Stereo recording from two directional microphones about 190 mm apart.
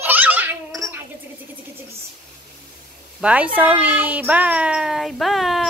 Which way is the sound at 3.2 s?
5° right (ahead or behind).